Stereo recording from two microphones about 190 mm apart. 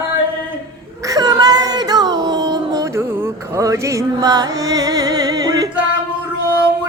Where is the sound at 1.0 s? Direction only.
20° right (ahead or behind).